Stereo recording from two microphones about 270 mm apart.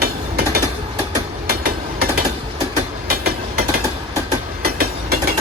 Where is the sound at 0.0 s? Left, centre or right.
Right.